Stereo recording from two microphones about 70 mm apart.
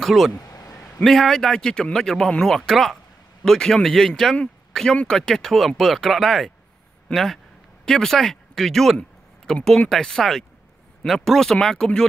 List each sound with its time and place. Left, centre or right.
0.0 s speech: centre
0.3 s a sound: left
0.8 s speech: centre